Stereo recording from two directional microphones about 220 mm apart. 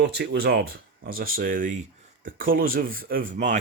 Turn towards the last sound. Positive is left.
turn(degrees=-35)  # may be behind; listen again after turning